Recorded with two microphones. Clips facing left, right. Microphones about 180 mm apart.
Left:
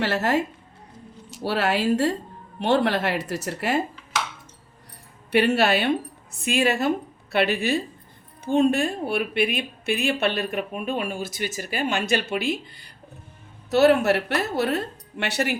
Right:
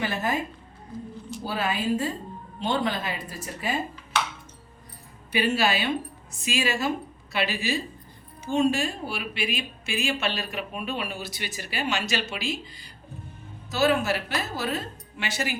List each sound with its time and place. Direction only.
0.0 s speech: 75° left (ahead or behind)
5.3 s speech: 65° left (ahead or behind)